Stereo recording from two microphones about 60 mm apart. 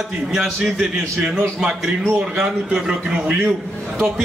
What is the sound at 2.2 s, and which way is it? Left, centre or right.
Speech, centre.